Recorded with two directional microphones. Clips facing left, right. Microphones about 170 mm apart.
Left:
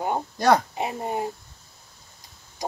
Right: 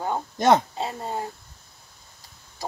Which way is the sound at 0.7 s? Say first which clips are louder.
Left 2 dB; 15° left (ahead or behind).